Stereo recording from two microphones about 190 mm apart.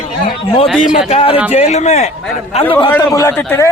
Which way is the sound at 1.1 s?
35° left (ahead or behind).